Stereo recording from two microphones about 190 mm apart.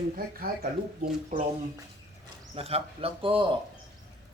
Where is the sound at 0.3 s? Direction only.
50° right (ahead or behind).